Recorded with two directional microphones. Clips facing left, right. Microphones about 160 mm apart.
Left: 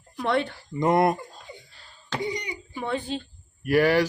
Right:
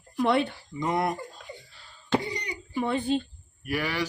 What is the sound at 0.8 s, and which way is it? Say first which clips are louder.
Speech: left 6 dB; 60° left (ahead or behind).